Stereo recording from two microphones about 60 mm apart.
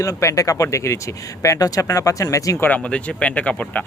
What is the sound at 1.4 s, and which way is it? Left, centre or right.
Speech, left.